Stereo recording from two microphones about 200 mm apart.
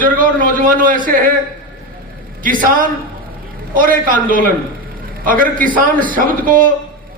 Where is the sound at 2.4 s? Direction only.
45° right (ahead or behind).